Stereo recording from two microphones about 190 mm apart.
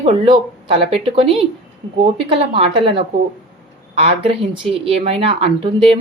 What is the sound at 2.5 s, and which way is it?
Speech, 25° right (ahead or behind).